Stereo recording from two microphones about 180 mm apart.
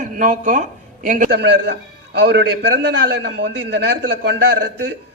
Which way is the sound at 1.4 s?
70° right (ahead or behind).